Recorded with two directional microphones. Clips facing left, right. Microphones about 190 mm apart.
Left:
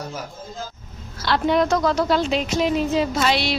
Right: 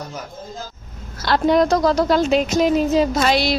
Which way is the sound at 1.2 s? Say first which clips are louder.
Right 3 dB; 40° right (ahead or behind).